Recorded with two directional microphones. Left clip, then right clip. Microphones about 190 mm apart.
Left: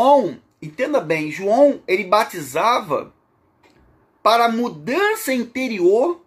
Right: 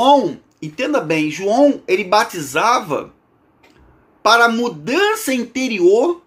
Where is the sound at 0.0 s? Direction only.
5° left (ahead or behind).